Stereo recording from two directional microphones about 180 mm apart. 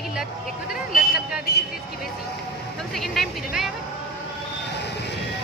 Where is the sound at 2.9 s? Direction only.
Centre (ahead or behind).